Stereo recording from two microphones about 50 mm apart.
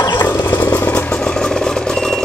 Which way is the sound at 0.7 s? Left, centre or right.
Left.